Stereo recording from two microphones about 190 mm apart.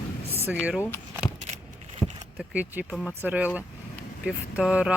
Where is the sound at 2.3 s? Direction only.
10° right (ahead or behind).